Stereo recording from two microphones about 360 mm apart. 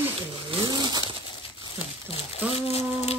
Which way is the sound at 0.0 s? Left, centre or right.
Centre.